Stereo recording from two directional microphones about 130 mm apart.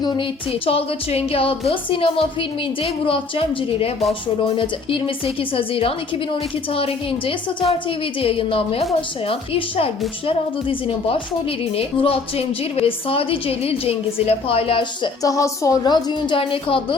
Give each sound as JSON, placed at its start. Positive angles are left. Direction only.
{"t": 0.0, "sound": "a woman's voice", "side_deg": 35}
{"t": 0.5, "sound": "a woman's voice", "side_deg": 45}
{"t": 15.2, "sound": "a woman's voice", "side_deg": 25}